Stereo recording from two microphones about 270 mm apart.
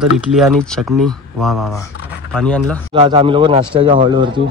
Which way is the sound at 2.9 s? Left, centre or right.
Centre.